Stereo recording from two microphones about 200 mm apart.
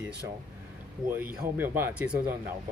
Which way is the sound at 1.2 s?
45° right (ahead or behind).